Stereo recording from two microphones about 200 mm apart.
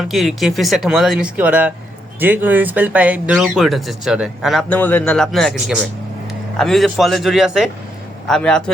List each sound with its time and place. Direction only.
0.0 s speech: centre (ahead or behind)